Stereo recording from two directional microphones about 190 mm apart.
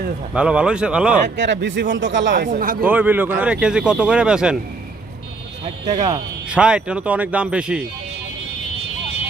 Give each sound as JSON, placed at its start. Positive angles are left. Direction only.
{"t": 0.3, "sound": "speech", "side_deg": -5}
{"t": 1.2, "sound": "a man's voice", "side_deg": -70}
{"t": 2.5, "sound": "speech", "side_deg": -45}
{"t": 2.8, "sound": "speech", "side_deg": -10}
{"t": 5.6, "sound": "speech", "side_deg": -35}
{"t": 6.5, "sound": "speech", "side_deg": -5}